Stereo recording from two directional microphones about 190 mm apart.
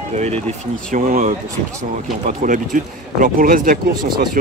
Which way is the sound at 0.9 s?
45° right (ahead or behind).